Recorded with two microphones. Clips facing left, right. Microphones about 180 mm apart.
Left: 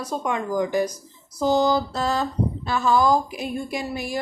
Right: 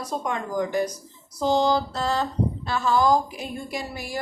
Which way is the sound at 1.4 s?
10° left (ahead or behind).